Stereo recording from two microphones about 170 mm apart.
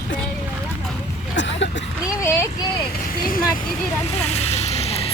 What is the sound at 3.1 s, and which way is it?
Vehicle, 55° left (ahead or behind).